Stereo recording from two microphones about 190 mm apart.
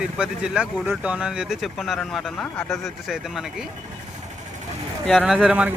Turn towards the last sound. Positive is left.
turn(degrees=-5)  # may be behind; listen again after turning